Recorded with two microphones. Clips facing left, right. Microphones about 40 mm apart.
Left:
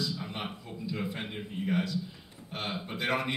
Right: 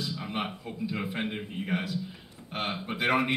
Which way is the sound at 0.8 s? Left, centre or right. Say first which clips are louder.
Right 3 dB; right.